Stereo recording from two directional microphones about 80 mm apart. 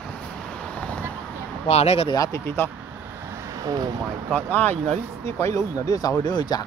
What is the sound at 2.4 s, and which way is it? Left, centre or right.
Speech, left.